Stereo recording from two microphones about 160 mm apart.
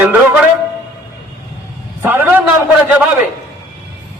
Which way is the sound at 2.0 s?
10° right (ahead or behind).